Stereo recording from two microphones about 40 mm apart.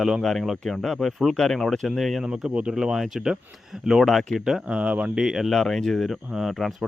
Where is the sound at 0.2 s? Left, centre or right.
Centre.